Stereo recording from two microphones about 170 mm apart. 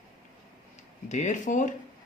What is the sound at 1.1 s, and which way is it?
Speech, 45° left (ahead or behind).